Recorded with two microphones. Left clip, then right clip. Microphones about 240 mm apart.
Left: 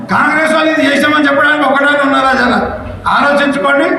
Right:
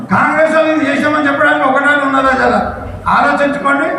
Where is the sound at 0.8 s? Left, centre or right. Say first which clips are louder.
Left 3 dB; left.